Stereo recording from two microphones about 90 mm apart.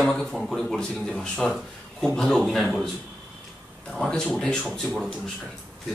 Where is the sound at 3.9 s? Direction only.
5° left (ahead or behind).